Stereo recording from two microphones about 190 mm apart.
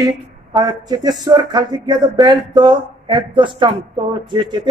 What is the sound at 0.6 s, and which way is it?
Speech, 20° right (ahead or behind).